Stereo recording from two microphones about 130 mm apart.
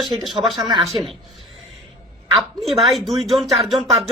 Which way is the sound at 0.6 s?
35° right (ahead or behind).